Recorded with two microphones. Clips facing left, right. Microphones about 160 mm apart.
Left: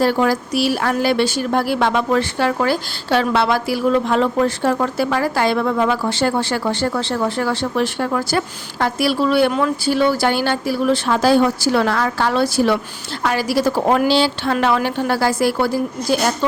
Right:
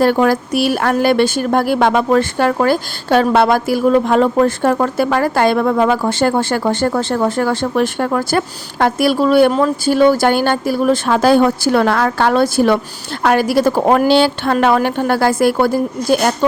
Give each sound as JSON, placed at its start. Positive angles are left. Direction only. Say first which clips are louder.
{"t": 0.0, "sound": "speech", "louder": "right 4 dB", "side_deg": -55}